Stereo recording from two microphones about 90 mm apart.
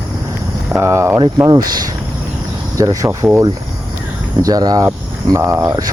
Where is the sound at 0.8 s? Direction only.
30° right (ahead or behind).